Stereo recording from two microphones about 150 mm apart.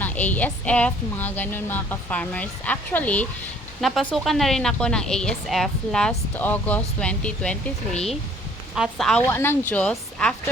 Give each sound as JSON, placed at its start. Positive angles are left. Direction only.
{"t": 0.0, "sound": "a woman's voice", "side_deg": 10}
{"t": 8.7, "sound": "speech", "side_deg": 0}
{"t": 9.2, "sound": "a woman's voice", "side_deg": 15}